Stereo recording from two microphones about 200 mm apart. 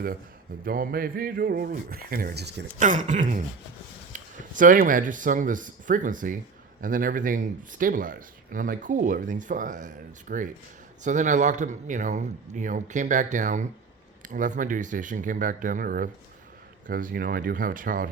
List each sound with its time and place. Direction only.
0.6 s speech: 45° right (ahead or behind)
2.7 s speech: 40° right (ahead or behind)